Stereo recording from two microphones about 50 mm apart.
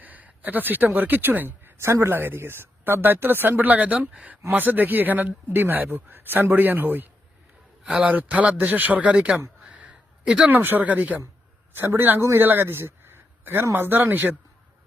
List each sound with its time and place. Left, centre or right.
0.0 s a sound: right
0.9 s a man's voice: right
1.8 s speech: right
3.6 s a man's voice: right
8.3 s speech: right
9.6 s a sound: right
10.5 s a man's voice: right
11.7 s a man's voice: right